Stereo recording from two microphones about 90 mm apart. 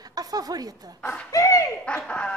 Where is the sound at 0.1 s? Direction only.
45° right (ahead or behind).